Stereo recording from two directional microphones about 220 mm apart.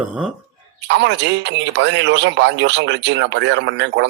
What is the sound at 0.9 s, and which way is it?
A man's voice, 55° right (ahead or behind).